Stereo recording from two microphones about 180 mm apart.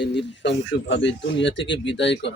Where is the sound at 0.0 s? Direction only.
75° left (ahead or behind).